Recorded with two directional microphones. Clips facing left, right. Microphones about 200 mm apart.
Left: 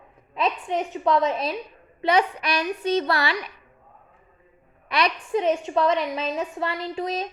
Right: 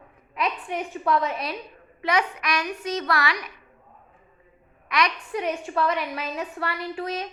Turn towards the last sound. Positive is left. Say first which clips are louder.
# left 2 dB
turn(degrees=25)  # may be behind; listen again after turning